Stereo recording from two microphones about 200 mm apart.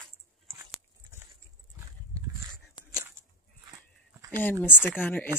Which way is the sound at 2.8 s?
20° left (ahead or behind).